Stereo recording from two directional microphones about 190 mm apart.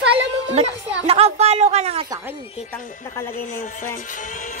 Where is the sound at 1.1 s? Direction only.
35° right (ahead or behind).